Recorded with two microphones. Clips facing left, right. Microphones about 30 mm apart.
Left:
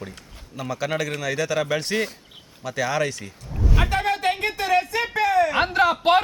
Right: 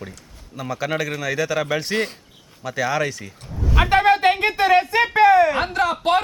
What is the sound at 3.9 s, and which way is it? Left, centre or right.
Music, right.